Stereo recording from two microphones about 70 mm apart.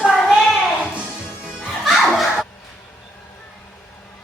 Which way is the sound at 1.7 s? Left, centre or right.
Centre.